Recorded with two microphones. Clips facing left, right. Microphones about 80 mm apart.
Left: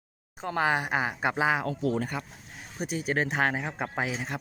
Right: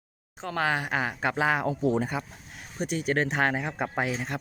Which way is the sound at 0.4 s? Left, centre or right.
Centre.